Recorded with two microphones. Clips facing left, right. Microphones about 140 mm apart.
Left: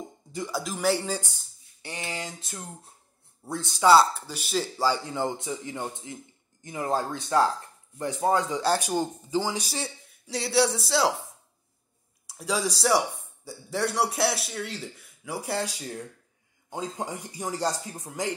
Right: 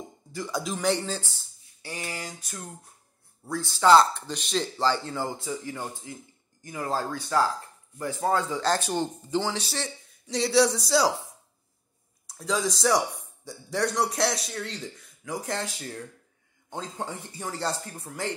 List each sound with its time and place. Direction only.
0.5 s speech: 5° left (ahead or behind)
1.8 s speech: 25° left (ahead or behind)
3.8 s a man's voice: 5° left (ahead or behind)
12.4 s a man's voice: 10° left (ahead or behind)